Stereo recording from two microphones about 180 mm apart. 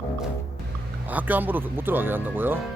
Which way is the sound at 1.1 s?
10° right (ahead or behind).